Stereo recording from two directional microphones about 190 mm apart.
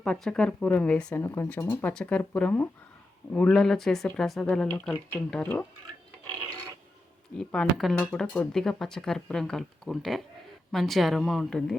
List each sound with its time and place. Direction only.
0.0 s speech: 5° left (ahead or behind)
7.3 s speech: 5° left (ahead or behind)